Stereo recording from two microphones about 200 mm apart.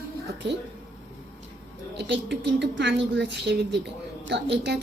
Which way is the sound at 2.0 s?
60° right (ahead or behind).